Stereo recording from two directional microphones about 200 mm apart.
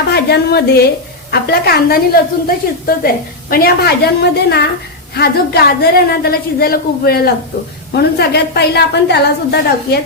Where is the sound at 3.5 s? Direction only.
50° left (ahead or behind).